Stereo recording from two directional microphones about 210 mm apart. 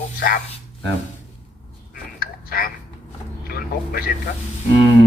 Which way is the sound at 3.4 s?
45° left (ahead or behind).